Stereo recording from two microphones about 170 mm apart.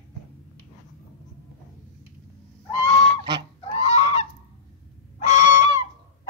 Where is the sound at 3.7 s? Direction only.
40° left (ahead or behind).